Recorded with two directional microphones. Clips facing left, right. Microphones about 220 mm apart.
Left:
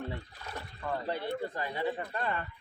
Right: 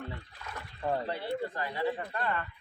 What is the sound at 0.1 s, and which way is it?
Trickle, 35° left (ahead or behind).